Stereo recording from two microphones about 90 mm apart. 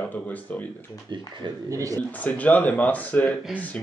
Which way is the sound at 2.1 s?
15° left (ahead or behind).